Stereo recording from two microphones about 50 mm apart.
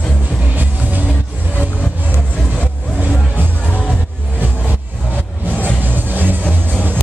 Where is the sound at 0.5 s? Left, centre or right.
Right.